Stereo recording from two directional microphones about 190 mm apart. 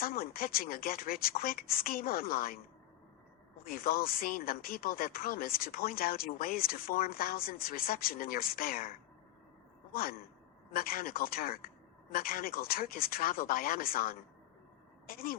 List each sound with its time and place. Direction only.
0.0 s speech: 50° left (ahead or behind)
3.6 s speech: 50° left (ahead or behind)